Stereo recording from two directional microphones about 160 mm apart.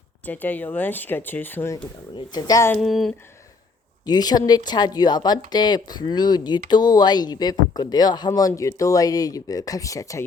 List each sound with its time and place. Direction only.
0.3 s speech: 10° left (ahead or behind)
2.1 s speech: 25° left (ahead or behind)
2.8 s a sound: centre (ahead or behind)
4.0 s speech: 25° left (ahead or behind)